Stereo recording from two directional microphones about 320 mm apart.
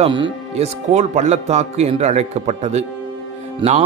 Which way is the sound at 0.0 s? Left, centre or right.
Centre.